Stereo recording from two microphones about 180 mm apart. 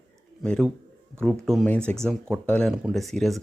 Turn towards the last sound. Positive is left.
turn(degrees=0)  # may be behind; listen again after turning